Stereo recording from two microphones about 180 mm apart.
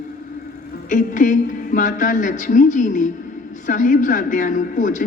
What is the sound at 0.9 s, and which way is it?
A woman's voice, 45° left (ahead or behind).